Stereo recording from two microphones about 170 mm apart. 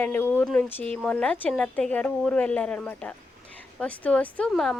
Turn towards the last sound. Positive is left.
turn(degrees=0)  # may be behind; listen again after turning